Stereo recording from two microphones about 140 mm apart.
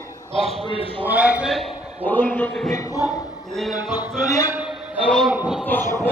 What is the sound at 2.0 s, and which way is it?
Speech, 15° left (ahead or behind).